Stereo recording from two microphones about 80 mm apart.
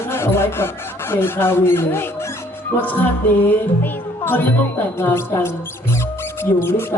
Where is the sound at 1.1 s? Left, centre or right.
Left.